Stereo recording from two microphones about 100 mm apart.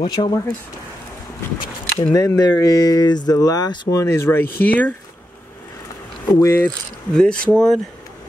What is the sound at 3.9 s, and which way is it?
Speech, 30° left (ahead or behind).